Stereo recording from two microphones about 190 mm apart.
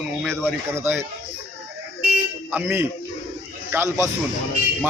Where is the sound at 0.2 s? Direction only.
5° left (ahead or behind).